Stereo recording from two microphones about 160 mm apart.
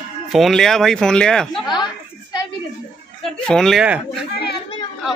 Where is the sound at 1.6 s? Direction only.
30° left (ahead or behind).